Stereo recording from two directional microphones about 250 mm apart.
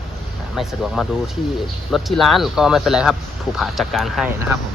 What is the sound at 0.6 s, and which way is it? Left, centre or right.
Speech, centre.